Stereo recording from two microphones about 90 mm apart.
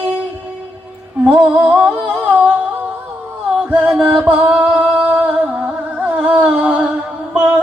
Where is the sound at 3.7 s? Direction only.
15° right (ahead or behind).